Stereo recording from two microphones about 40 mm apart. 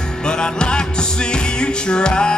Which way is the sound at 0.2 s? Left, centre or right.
Left.